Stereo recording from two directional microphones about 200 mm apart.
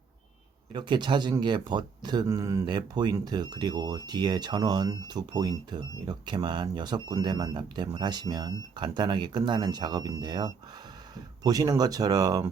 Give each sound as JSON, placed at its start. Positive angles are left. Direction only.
{"t": 0.7, "sound": "speech", "side_deg": -20}